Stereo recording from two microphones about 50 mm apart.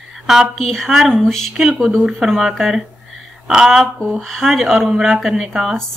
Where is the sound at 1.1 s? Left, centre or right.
Centre.